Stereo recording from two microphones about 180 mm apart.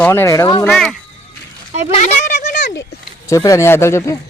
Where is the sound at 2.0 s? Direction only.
45° left (ahead or behind).